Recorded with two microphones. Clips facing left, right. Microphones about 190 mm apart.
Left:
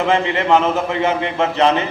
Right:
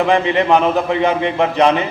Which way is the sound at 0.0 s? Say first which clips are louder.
Right 3 dB; 15° right (ahead or behind).